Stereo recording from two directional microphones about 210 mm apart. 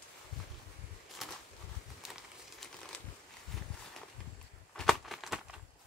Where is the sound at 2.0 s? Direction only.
Centre (ahead or behind).